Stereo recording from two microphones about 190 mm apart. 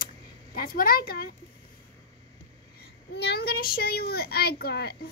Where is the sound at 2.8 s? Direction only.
60° left (ahead or behind).